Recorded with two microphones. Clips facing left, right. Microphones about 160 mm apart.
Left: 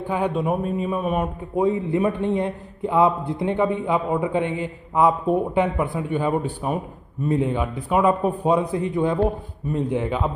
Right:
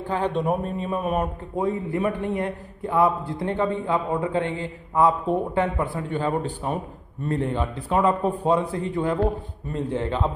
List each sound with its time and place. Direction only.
0.1 s speech: 10° left (ahead or behind)
1.6 s a man's voice: 20° left (ahead or behind)